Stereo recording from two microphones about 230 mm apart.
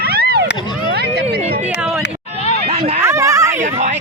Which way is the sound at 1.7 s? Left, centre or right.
Centre.